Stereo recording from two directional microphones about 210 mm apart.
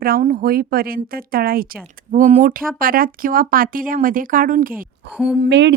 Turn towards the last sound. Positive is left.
turn(degrees=-55)  # may be behind; listen again after turning